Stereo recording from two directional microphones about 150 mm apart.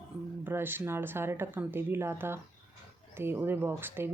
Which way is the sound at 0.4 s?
15° right (ahead or behind).